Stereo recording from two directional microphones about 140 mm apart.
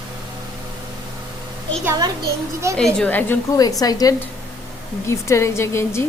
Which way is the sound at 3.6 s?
25° left (ahead or behind).